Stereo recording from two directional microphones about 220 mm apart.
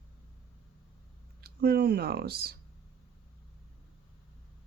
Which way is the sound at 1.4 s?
45° right (ahead or behind).